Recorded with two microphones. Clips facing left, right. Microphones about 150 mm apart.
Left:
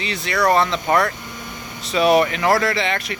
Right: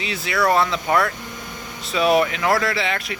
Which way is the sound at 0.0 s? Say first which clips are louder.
Left 1 dB; 5° right (ahead or behind).